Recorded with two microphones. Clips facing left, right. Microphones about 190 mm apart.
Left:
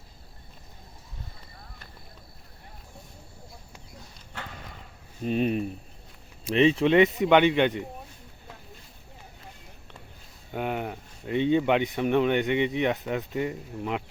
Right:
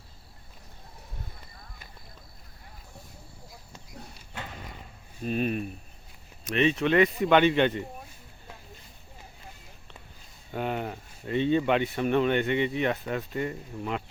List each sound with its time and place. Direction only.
5.2 s speech: 25° left (ahead or behind)
10.5 s a sound: 15° left (ahead or behind)
11.3 s speech: 15° left (ahead or behind)